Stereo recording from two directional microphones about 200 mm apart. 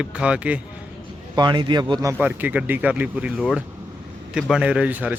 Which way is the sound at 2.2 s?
10° right (ahead or behind).